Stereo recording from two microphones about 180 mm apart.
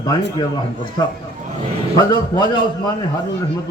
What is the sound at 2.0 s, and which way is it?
Speech, 25° left (ahead or behind).